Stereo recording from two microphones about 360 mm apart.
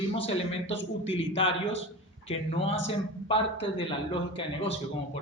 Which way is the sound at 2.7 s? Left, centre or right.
Centre.